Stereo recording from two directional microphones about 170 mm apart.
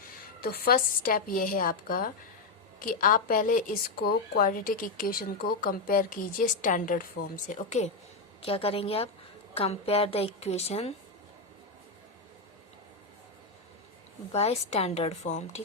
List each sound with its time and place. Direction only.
0.4 s a woman's voice: 60° left (ahead or behind); by 7.9 s 45° left (ahead or behind)
8.4 s a woman's voice: 35° left (ahead or behind)
14.3 s a woman's voice: 35° left (ahead or behind)